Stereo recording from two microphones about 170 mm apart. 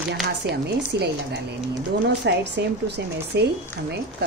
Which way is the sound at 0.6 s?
75° right (ahead or behind).